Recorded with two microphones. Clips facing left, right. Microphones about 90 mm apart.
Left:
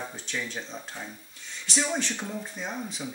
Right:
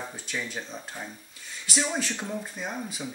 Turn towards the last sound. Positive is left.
turn(degrees=-5)  # may be behind; listen again after turning